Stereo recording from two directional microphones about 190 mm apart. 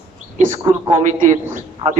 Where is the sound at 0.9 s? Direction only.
40° right (ahead or behind).